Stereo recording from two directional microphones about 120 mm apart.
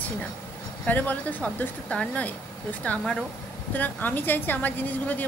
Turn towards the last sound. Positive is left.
turn(degrees=15)  # may be behind; listen again after turning